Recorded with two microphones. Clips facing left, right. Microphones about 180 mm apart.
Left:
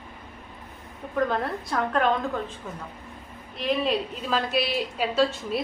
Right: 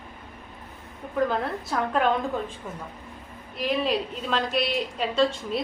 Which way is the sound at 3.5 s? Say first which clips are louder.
Even; centre (ahead or behind).